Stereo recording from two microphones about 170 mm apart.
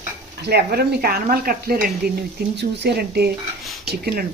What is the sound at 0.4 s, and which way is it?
Speech, 70° right (ahead or behind).